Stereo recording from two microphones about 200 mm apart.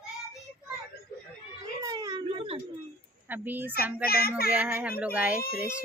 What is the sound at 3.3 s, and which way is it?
Speech, 10° right (ahead or behind).